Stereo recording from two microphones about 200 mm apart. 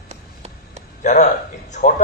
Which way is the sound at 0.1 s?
35° right (ahead or behind).